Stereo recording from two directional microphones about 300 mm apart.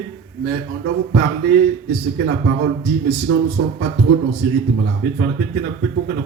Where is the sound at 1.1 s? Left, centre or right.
Right.